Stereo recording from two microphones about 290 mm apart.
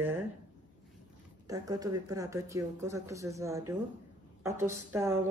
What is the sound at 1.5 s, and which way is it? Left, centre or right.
Speech, centre.